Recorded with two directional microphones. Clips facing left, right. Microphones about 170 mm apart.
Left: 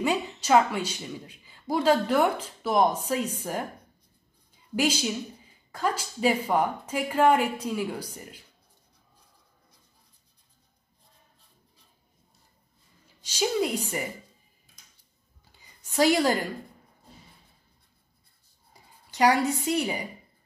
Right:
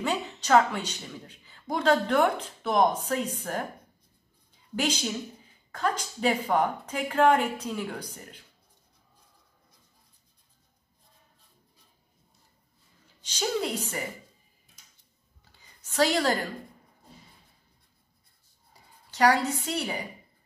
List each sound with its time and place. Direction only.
0.0 s speech: 10° left (ahead or behind)
4.7 s speech: 10° left (ahead or behind)
13.2 s speech: 10° left (ahead or behind)
15.9 s a woman's voice: 15° left (ahead or behind)
18.7 s speech: 15° left (ahead or behind)